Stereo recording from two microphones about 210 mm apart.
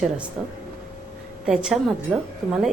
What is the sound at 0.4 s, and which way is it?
A woman's voice, centre (ahead or behind).